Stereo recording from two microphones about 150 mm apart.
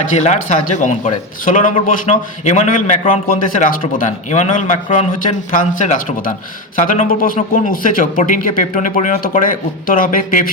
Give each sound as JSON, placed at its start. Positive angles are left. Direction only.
{"t": 0.2, "sound": "a man's voice", "side_deg": 50}